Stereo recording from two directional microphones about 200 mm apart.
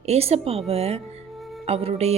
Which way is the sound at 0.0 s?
30° right (ahead or behind).